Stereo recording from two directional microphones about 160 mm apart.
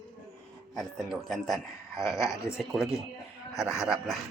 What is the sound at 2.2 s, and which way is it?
Speech, 20° left (ahead or behind).